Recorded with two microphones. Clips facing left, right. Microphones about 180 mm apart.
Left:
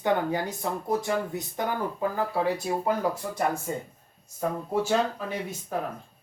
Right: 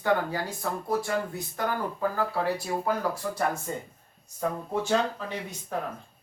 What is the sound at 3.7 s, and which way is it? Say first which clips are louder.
Speech: left 2 dB; 5° left (ahead or behind).